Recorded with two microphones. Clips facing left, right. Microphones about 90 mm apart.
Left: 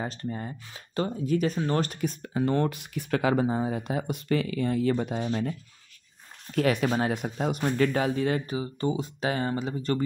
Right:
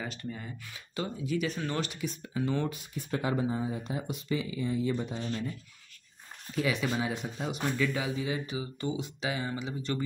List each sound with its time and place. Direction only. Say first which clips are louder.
0.0 s speech: left 6 dB; 35° left (ahead or behind); by 8.5 s 55° left (ahead or behind)
8.5 s speech: left 5 dB; 40° left (ahead or behind)